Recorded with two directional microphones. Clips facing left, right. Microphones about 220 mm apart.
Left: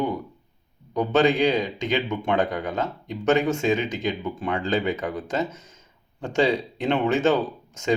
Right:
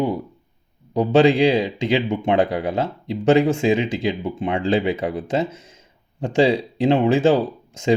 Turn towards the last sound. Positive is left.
turn(degrees=-30)  # may be behind; listen again after turning